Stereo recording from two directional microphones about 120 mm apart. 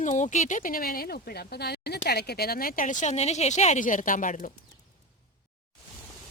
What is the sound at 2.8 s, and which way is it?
A woman's voice, 90° left.